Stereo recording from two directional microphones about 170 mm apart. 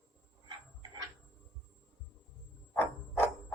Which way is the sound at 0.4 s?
25° right (ahead or behind).